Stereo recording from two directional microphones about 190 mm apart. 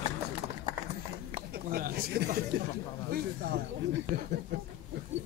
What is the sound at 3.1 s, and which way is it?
Speech, 55° right (ahead or behind).